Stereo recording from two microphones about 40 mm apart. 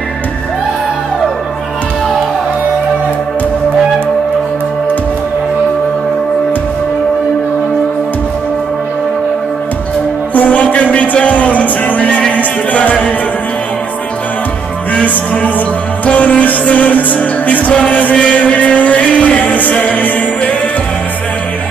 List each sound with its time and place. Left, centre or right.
10.3 s music: left
15.0 s music: left